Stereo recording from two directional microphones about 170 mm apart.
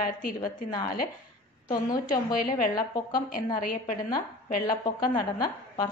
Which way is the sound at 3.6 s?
55° left (ahead or behind).